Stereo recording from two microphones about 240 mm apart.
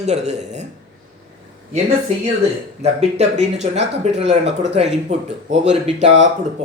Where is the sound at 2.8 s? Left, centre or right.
Right.